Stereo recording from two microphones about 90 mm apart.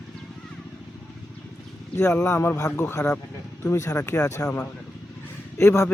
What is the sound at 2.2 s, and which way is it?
Speech, 30° left (ahead or behind).